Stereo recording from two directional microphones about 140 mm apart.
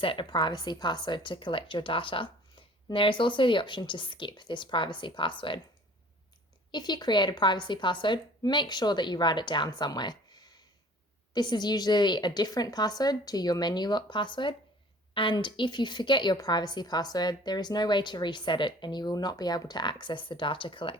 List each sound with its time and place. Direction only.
0.0 s a woman's voice: 35° left (ahead or behind)
6.7 s a woman's voice: 30° left (ahead or behind)